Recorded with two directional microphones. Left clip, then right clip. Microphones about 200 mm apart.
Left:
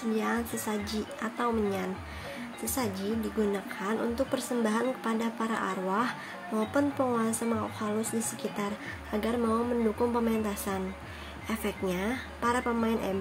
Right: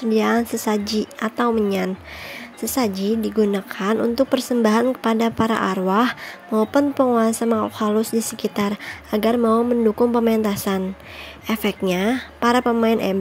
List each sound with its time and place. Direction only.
0.1 s a woman's voice: 45° right (ahead or behind)